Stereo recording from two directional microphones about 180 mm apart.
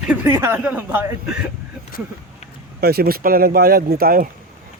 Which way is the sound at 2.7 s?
60° right (ahead or behind).